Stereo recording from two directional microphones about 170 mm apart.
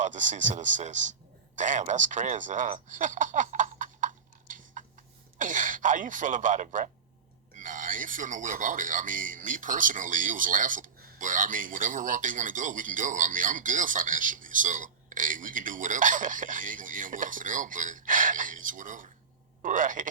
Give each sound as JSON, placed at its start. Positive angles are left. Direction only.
{"t": 0.0, "sound": "speech", "side_deg": -45}
{"t": 2.9, "sound": "a sound", "side_deg": -50}
{"t": 5.4, "sound": "speech", "side_deg": -50}